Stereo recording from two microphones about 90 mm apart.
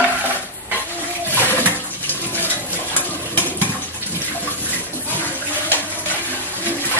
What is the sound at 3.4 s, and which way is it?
Water, 20° left (ahead or behind).